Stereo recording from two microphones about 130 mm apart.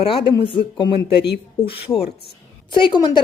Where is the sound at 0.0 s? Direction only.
40° left (ahead or behind).